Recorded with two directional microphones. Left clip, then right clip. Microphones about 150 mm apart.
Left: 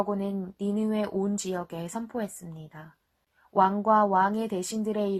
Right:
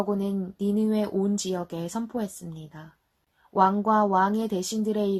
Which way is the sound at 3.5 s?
20° left (ahead or behind).